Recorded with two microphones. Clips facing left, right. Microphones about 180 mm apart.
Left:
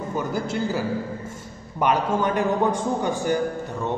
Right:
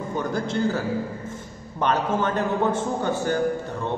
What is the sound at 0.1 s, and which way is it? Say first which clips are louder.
A man's voice: right 1 dB; 10° left (ahead or behind).